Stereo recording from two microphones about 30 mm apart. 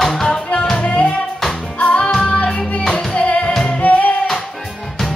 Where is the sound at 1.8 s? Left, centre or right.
Left.